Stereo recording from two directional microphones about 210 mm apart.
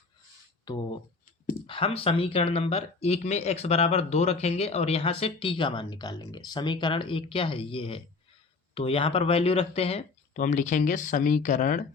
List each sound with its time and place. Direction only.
0.6 s speech: 20° left (ahead or behind); by 11.9 s 35° left (ahead or behind)